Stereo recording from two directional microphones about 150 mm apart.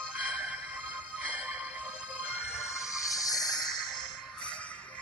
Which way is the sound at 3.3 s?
25° left (ahead or behind).